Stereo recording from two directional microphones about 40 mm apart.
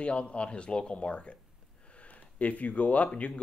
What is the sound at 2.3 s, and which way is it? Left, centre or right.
Speech, left.